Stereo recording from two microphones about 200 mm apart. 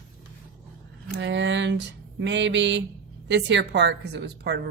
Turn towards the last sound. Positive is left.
turn(degrees=-55)  # may be behind; listen again after turning